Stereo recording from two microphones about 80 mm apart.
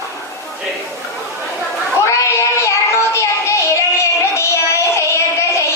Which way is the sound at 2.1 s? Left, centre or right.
Left.